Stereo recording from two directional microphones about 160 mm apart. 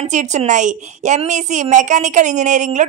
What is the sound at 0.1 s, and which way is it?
A woman's voice, 50° right (ahead or behind).